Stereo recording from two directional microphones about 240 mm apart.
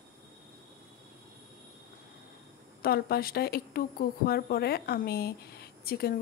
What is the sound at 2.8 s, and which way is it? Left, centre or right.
A woman's voice, left.